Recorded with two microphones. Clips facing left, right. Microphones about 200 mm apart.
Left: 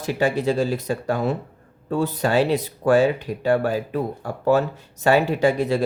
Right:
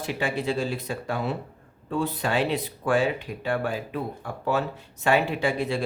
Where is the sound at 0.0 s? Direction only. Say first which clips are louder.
Left 6 dB; 40° left (ahead or behind).